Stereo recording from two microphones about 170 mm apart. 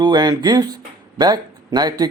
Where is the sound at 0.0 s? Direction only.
25° right (ahead or behind).